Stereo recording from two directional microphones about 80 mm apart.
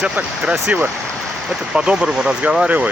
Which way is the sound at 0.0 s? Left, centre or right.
Centre.